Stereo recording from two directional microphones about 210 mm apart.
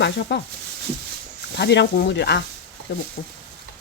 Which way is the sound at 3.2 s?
40° left (ahead or behind).